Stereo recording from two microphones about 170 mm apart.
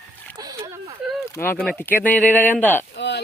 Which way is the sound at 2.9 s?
90° left.